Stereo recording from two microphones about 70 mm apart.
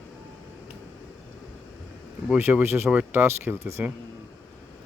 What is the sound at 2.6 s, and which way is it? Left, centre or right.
Speech, right.